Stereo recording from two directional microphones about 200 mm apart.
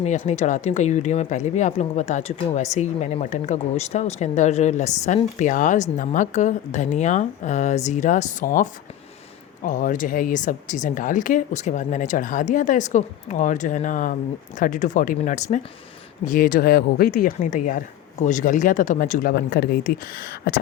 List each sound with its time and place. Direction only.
0.0 s speech: 35° left (ahead or behind)
9.6 s speech: 40° left (ahead or behind)